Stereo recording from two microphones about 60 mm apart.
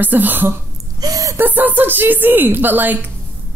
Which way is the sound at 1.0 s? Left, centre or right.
Right.